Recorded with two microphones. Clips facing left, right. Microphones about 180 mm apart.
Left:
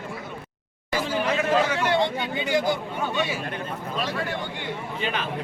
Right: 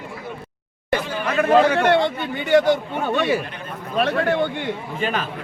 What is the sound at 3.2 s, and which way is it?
A man's voice, 60° right (ahead or behind).